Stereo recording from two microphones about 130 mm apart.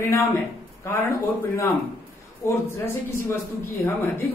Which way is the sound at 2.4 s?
20° left (ahead or behind).